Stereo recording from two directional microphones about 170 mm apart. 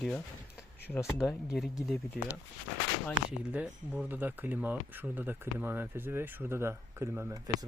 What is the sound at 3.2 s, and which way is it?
Speech, 5° right (ahead or behind).